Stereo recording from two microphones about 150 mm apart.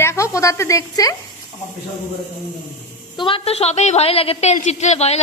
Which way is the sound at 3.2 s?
35° left (ahead or behind).